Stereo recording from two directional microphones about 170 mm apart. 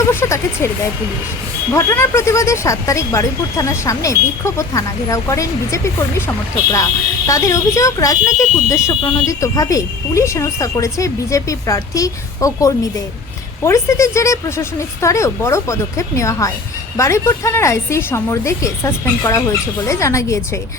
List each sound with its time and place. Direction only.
0.1 s speech: 15° left (ahead or behind)
1.7 s speech: 15° left (ahead or behind)